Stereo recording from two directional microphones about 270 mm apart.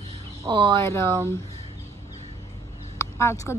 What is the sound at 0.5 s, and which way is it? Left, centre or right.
Speech, centre.